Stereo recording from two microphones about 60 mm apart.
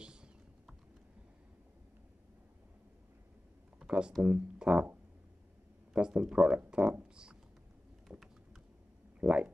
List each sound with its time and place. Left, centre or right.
0.0 s typing: centre
3.8 s speech: centre
5.9 s speech: centre
8.1 s typing: centre
9.2 s speech: centre